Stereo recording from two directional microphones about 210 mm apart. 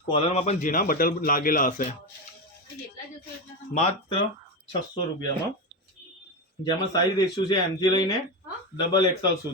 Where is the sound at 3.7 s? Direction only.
30° left (ahead or behind).